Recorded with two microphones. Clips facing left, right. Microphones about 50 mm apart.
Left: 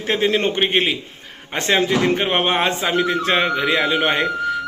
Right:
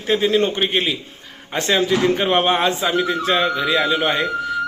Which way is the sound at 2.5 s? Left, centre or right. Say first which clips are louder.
Right 1 dB; left.